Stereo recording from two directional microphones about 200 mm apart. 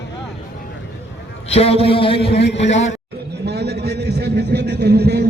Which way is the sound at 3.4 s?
55° right (ahead or behind).